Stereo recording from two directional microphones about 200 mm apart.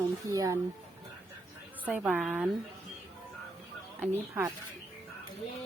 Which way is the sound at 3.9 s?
10° right (ahead or behind).